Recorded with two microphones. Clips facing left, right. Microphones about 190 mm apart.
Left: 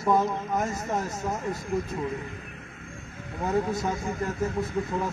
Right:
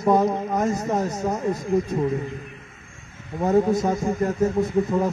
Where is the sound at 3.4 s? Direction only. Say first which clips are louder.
Right 7 dB; 35° right (ahead or behind).